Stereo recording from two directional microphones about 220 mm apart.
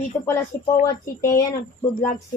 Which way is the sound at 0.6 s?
15° left (ahead or behind).